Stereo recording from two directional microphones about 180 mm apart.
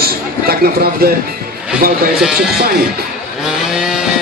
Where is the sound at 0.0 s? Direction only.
60° right (ahead or behind).